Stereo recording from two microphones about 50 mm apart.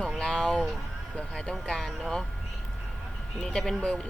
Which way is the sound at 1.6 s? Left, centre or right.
Centre.